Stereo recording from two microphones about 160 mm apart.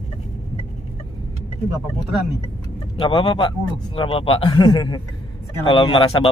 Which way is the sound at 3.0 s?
30° left (ahead or behind).